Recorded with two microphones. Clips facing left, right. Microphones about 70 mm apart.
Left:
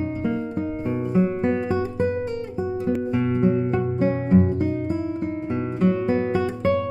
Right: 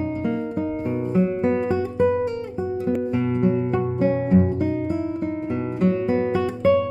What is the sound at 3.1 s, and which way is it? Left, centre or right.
Music, centre.